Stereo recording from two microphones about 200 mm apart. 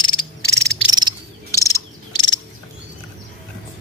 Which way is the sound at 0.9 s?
20° right (ahead or behind).